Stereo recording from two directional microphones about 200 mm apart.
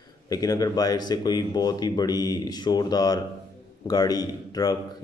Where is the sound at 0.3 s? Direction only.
20° left (ahead or behind).